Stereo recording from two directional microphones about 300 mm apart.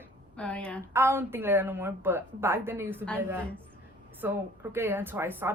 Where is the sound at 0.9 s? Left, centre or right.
Centre.